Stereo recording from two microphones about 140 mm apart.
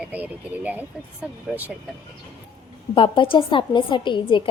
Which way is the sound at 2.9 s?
40° left (ahead or behind).